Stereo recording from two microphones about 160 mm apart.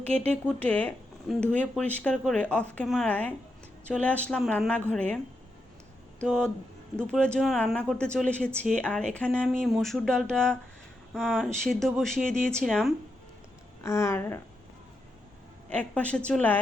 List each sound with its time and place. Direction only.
0.1 s speech: 5° left (ahead or behind)
6.2 s speech: centre (ahead or behind)
13.8 s speech: 15° left (ahead or behind)
15.7 s speech: 10° left (ahead or behind)